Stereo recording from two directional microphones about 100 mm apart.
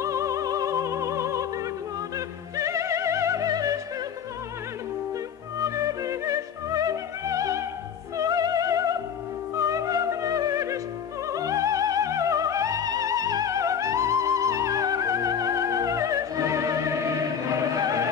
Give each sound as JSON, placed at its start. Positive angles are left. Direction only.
{"t": 0.0, "sound": "music", "side_deg": -30}
{"t": 5.6, "sound": "music", "side_deg": -35}